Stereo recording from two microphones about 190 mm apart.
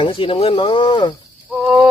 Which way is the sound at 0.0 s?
30° left (ahead or behind).